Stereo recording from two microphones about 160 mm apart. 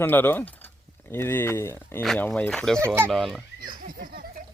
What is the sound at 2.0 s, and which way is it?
Speech, centre (ahead or behind).